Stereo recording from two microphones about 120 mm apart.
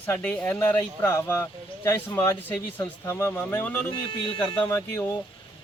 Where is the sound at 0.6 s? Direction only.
25° left (ahead or behind).